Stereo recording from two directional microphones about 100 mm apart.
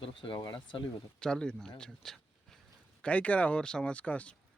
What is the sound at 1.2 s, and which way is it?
Speech, 10° left (ahead or behind).